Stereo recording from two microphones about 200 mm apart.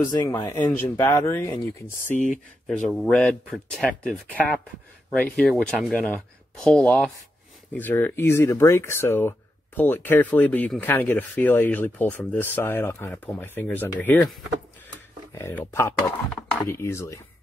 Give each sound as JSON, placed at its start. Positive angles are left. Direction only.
{"t": 0.1, "sound": "speech", "side_deg": 20}
{"t": 2.1, "sound": "speech", "side_deg": 40}
{"t": 2.9, "sound": "speech", "side_deg": 0}
{"t": 15.3, "sound": "speech", "side_deg": 15}